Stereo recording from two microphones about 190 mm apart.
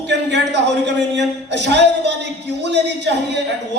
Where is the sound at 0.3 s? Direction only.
65° right (ahead or behind).